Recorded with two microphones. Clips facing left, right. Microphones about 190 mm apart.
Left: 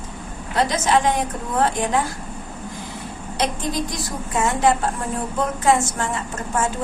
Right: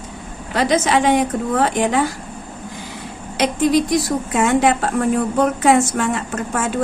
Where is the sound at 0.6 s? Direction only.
75° right (ahead or behind).